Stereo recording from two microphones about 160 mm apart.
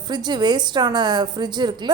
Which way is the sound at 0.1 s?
25° right (ahead or behind).